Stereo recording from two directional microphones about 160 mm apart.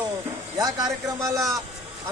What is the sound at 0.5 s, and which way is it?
Speech, 25° right (ahead or behind).